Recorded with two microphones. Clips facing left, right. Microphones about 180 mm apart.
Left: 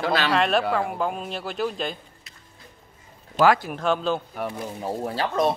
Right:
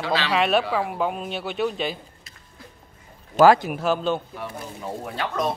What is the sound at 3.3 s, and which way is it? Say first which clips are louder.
Speech: right 4 dB; 40° right (ahead or behind).